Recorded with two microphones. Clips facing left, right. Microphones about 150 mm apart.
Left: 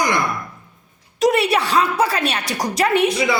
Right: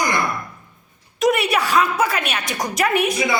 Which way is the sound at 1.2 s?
30° left (ahead or behind).